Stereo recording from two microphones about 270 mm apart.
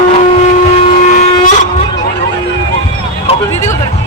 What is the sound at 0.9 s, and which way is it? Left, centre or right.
Vehicle, left.